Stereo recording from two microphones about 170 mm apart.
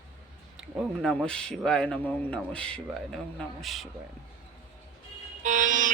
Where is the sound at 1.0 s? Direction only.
5° left (ahead or behind).